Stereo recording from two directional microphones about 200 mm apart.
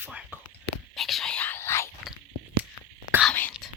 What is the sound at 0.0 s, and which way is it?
Speech, 10° right (ahead or behind).